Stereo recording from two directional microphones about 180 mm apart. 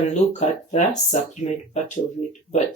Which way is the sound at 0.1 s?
40° left (ahead or behind).